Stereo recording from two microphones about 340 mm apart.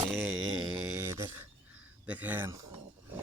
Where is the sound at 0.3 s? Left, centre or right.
Right.